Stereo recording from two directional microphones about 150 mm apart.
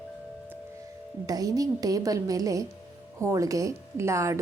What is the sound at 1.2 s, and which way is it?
A woman's voice, 25° right (ahead or behind).